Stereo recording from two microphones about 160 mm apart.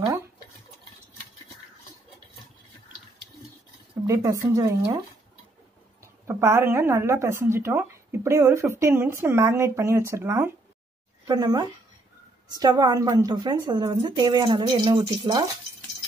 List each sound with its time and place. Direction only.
4.1 s a woman's voice: 20° right (ahead or behind)
6.2 s a woman's voice: 15° right (ahead or behind)